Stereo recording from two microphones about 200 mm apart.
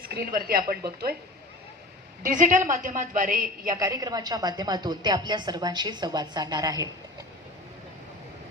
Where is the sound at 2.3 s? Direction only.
40° right (ahead or behind).